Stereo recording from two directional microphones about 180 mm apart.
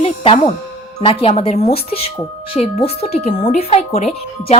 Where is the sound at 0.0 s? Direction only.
30° left (ahead or behind).